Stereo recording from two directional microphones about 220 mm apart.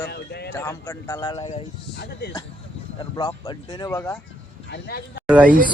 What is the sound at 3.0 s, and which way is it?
Speech, 15° left (ahead or behind).